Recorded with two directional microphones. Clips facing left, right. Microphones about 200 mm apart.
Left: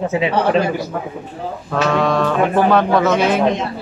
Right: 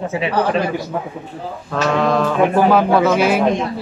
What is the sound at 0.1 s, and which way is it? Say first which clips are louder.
Speech: left 1 dB; 20° left (ahead or behind).